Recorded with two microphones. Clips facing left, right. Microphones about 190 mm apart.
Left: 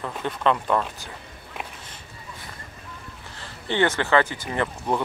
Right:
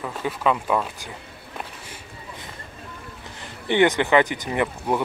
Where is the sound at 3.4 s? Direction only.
15° right (ahead or behind).